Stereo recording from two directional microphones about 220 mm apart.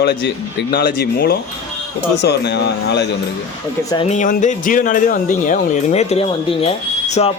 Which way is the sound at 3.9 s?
25° left (ahead or behind).